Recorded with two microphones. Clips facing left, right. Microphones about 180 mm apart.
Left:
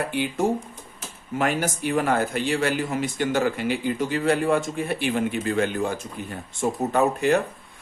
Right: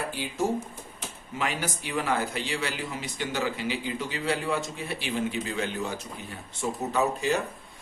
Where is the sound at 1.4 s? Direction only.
50° left (ahead or behind).